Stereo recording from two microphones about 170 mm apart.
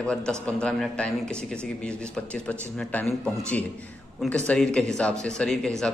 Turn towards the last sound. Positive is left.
turn(degrees=5)  # may be behind; listen again after turning